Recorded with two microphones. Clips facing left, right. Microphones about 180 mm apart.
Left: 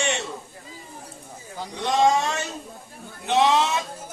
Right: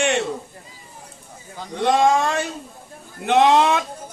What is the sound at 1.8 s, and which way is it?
Speech, 55° right (ahead or behind).